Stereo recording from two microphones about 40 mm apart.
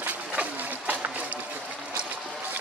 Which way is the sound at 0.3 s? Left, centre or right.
Right.